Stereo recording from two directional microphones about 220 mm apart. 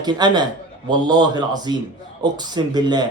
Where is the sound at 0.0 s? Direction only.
20° right (ahead or behind).